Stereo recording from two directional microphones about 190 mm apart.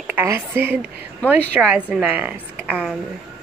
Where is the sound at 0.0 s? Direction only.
10° right (ahead or behind).